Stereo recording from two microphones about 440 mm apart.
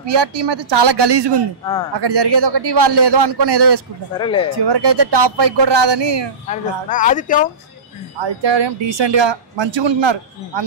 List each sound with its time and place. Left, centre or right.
0.0 s a man's voice: right
4.2 s speech: centre
4.6 s a man's voice: right
6.5 s speech: centre
8.2 s speech: right